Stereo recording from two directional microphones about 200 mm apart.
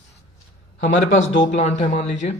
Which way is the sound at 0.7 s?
35° left (ahead or behind).